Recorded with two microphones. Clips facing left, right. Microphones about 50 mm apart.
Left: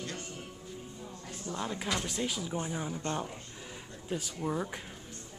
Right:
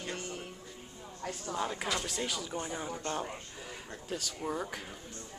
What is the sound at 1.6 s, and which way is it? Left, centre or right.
Speech, centre.